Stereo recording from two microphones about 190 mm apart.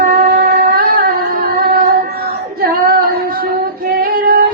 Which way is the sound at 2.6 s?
55° right (ahead or behind).